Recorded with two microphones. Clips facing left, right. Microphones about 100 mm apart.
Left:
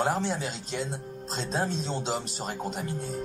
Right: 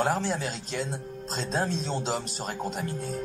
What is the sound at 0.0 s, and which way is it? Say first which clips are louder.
Speech: right 1 dB; 25° left (ahead or behind).